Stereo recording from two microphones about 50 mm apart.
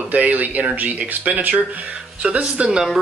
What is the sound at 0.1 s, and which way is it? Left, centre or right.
Speech, right.